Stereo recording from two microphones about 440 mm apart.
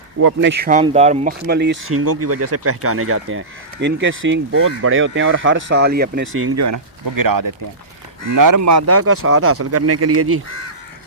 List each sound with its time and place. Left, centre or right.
0.2 s speech: right